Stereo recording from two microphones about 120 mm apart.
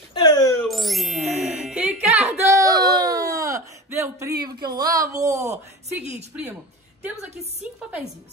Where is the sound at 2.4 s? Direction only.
25° right (ahead or behind).